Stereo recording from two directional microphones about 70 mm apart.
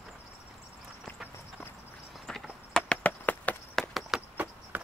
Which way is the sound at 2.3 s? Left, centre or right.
Centre.